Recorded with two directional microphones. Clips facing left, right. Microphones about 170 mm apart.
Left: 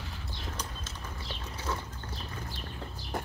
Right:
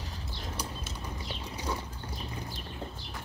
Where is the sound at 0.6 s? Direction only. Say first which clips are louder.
Right 2 dB; 10° right (ahead or behind).